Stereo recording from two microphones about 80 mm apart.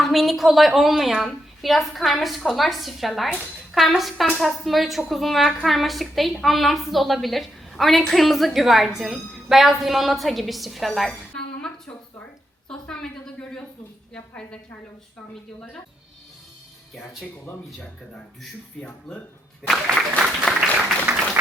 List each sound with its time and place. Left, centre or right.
0.0 s a woman's voice: centre
12.6 s a woman's voice: centre
14.1 s a woman's voice: centre
18.8 s a woman's voice: centre
19.7 s speech: centre
20.7 s a sound: right